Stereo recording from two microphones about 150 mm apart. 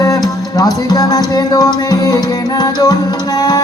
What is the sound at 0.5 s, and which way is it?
Music, 25° left (ahead or behind).